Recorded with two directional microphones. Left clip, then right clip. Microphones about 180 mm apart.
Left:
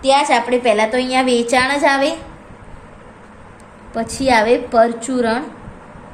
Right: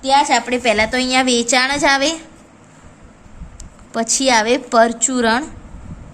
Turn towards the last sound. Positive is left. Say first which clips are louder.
# right 2 dB
turn(degrees=-30)  # may be behind; listen again after turning